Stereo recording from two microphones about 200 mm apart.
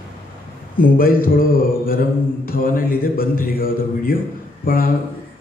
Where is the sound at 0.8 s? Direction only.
45° left (ahead or behind).